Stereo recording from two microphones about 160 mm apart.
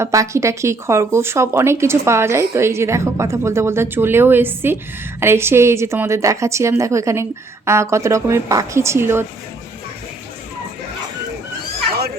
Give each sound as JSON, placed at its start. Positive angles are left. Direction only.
{"t": 0.0, "sound": "speech", "side_deg": -20}